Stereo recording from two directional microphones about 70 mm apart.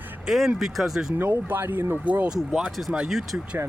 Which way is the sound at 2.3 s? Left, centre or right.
Centre.